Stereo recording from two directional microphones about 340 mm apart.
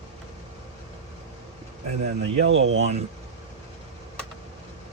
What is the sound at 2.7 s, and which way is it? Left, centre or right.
Speech, centre.